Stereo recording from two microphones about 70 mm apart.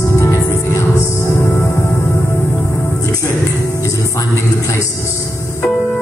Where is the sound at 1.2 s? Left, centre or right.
Left.